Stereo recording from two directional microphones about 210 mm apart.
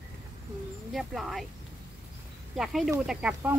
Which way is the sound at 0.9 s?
Centre (ahead or behind).